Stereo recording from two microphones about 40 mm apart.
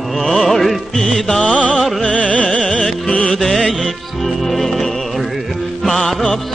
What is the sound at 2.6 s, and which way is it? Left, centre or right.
Music, centre.